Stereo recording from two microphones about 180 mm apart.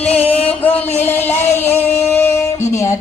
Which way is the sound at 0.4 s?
10° left (ahead or behind).